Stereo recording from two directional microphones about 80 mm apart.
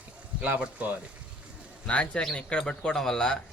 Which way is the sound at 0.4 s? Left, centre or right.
Centre.